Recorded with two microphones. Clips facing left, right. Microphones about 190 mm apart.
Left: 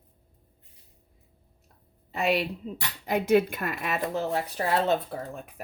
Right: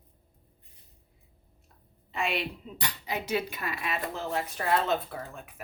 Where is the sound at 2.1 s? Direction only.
40° left (ahead or behind).